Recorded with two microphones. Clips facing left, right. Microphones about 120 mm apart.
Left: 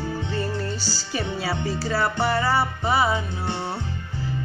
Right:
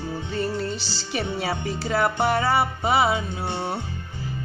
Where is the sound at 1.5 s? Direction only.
20° right (ahead or behind).